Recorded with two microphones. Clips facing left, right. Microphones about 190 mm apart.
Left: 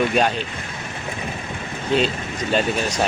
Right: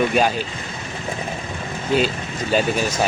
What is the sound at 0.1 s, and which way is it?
Speech, 5° right (ahead or behind).